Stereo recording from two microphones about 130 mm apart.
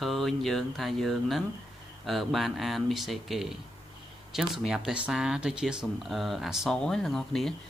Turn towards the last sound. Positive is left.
turn(degrees=5)  # may be behind; listen again after turning